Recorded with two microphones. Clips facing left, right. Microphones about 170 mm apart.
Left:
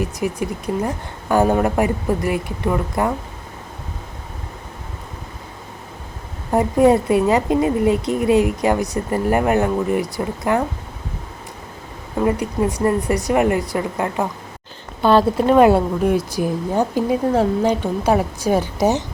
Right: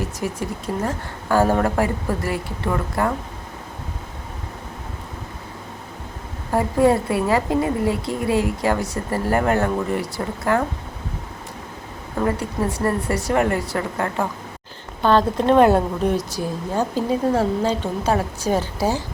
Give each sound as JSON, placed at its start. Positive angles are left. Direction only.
{"t": 0.0, "sound": "speech", "side_deg": 15}
{"t": 6.5, "sound": "a woman's voice", "side_deg": 20}
{"t": 12.2, "sound": "speech", "side_deg": 15}